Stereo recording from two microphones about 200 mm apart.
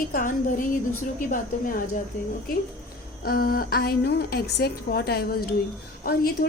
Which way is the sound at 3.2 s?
50° left (ahead or behind).